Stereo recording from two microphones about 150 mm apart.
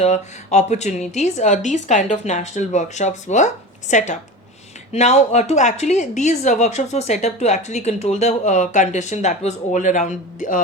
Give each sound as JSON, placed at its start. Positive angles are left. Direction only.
{"t": 0.0, "sound": "a woman's voice", "side_deg": 50}